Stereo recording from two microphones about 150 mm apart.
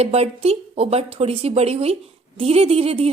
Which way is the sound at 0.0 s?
45° right (ahead or behind).